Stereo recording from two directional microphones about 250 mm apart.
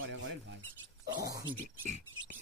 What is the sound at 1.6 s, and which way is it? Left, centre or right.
Speech, right.